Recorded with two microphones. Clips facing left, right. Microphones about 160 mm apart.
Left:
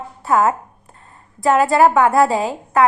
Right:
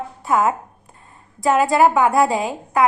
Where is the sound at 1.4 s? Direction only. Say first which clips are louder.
Left 2 dB; 20° right (ahead or behind).